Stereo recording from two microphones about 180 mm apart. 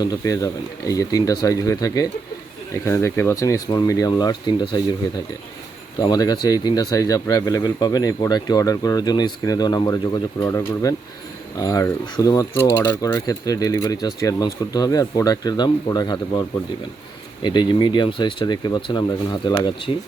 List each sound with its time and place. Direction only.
0.0 s speech: 20° left (ahead or behind)
6.0 s speech: 20° left (ahead or behind)
17.4 s speech: 25° left (ahead or behind)